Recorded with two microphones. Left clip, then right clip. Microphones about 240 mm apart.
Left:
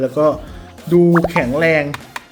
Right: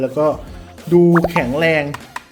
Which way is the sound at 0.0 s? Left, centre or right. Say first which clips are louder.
Left 2 dB; centre.